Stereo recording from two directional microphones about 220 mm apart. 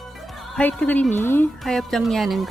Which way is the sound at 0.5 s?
5° left (ahead or behind).